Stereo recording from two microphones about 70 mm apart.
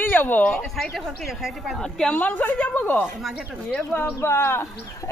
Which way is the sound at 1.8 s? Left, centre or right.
Centre.